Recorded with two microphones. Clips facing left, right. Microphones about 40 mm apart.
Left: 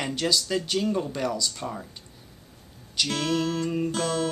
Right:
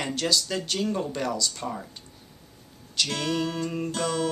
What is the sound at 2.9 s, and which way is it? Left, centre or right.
Speech, centre.